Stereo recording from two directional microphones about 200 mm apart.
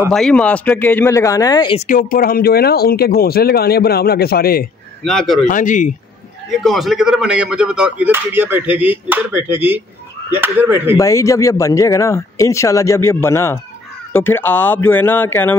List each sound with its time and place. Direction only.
0.1 s speech: 5° left (ahead or behind); by 1.8 s 20° left (ahead or behind)
1.8 s speech: 40° left (ahead or behind)
5.0 s a man's voice: centre (ahead or behind)
5.5 s speech: 40° left (ahead or behind)
6.6 s speech: centre (ahead or behind)
11.0 s speech: 15° left (ahead or behind)